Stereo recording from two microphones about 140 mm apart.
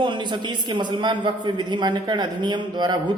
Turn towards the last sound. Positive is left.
turn(degrees=-30)  # may be behind; listen again after turning